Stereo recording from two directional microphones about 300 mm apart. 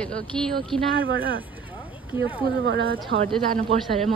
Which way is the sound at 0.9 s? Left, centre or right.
Right.